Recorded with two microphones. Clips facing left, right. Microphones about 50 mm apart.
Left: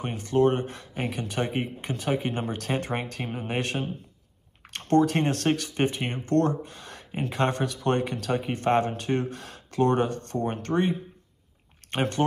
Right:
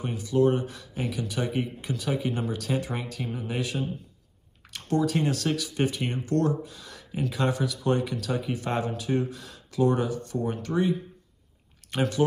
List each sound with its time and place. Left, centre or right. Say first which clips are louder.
0.0 s speech: left 1 dB; left